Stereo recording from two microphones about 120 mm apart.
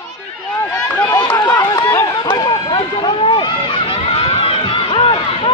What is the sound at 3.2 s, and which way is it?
Run, 45° left (ahead or behind).